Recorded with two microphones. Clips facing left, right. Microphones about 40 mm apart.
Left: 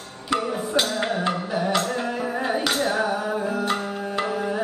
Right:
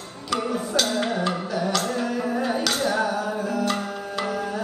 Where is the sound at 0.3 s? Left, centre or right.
Left.